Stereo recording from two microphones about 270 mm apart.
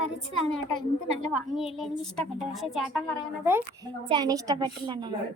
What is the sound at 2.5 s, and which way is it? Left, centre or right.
Speech, centre.